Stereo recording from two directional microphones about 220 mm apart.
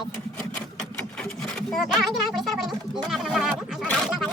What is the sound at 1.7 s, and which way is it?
Speech, centre (ahead or behind).